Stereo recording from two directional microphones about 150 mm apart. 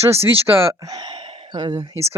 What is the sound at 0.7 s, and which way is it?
Speech, 25° right (ahead or behind).